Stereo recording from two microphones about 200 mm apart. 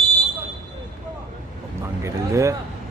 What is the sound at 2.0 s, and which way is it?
Speech, 15° right (ahead or behind).